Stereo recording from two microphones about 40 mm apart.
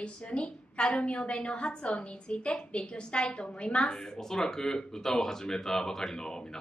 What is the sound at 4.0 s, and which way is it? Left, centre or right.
Speech, centre.